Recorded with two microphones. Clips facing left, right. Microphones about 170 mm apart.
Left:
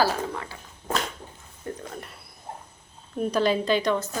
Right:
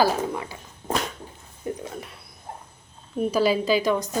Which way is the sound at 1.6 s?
10° right (ahead or behind).